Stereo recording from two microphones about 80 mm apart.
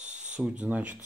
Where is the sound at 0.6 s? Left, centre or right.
Centre.